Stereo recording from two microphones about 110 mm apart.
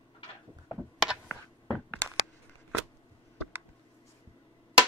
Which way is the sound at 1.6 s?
20° left (ahead or behind).